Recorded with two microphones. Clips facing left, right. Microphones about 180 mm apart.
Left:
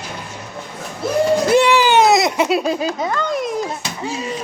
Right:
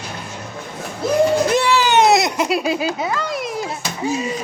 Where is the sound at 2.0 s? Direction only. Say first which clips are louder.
Left 1 dB; centre (ahead or behind).